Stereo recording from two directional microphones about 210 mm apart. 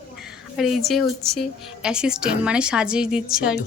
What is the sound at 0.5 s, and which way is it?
Speech, centre (ahead or behind).